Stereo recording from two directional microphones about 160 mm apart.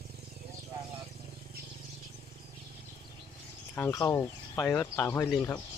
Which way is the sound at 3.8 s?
20° left (ahead or behind).